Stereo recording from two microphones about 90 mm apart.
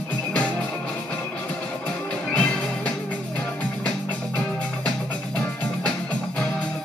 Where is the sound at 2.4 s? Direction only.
10° left (ahead or behind).